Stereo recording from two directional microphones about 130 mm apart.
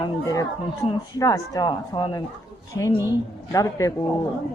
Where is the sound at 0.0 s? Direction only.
25° left (ahead or behind).